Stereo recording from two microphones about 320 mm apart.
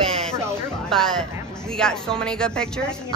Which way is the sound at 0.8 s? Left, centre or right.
Centre.